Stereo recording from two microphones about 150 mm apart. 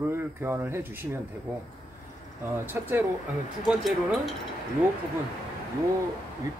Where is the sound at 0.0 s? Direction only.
15° right (ahead or behind).